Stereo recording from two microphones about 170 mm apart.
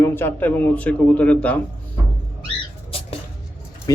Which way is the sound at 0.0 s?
15° left (ahead or behind).